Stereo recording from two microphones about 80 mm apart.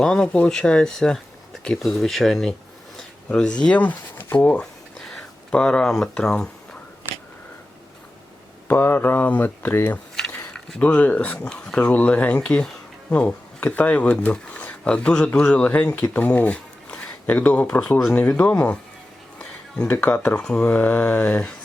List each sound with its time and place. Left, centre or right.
0.0 s speech: centre
4.4 s speech: centre
8.6 s speech: left
10.2 s a sound: centre
10.8 s speech: centre